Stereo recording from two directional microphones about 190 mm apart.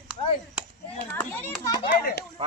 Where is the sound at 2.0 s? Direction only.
55° left (ahead or behind).